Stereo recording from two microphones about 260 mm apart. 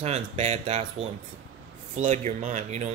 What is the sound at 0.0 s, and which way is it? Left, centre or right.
Speech, right.